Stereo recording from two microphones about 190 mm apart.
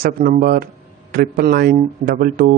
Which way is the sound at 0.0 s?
55° right (ahead or behind).